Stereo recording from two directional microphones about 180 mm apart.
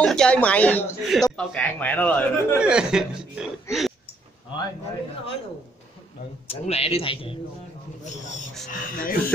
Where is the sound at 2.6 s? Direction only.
5° right (ahead or behind).